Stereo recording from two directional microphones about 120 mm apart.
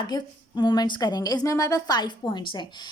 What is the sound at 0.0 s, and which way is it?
A woman's voice, 40° left (ahead or behind).